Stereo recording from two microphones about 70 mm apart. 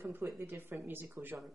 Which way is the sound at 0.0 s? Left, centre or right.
Right.